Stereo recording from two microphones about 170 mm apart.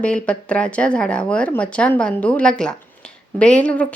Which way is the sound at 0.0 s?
5° left (ahead or behind).